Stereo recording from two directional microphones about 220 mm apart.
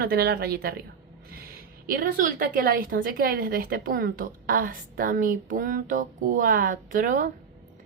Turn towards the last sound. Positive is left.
turn(degrees=-40)  # may be behind; listen again after turning